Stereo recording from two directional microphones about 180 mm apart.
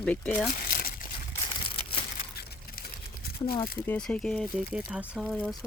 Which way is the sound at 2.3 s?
60° left (ahead or behind).